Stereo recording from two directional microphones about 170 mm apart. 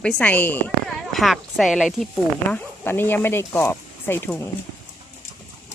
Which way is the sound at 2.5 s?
15° left (ahead or behind).